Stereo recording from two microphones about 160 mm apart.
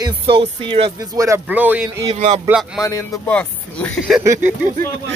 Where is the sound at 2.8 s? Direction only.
20° left (ahead or behind).